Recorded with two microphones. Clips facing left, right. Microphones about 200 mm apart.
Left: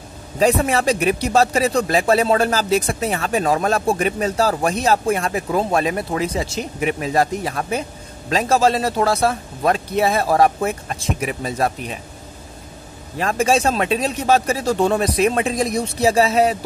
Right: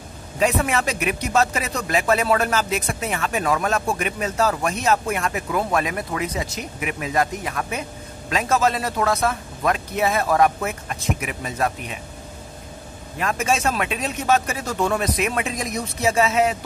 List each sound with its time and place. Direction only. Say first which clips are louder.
0.4 s speech: left 4 dB; 35° left (ahead or behind)
13.2 s speech: left 5 dB; 30° left (ahead or behind)